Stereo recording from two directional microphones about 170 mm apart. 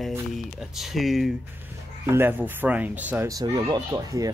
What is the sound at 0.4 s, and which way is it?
Speech, centre (ahead or behind).